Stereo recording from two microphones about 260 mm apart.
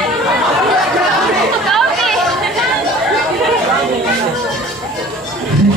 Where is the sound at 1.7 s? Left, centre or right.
Centre.